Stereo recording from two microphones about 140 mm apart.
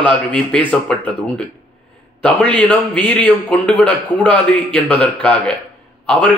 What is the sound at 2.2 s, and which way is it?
A man's voice, 10° left (ahead or behind).